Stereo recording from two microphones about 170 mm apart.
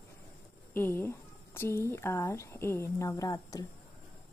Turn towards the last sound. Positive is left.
turn(degrees=20)  # may be behind; listen again after turning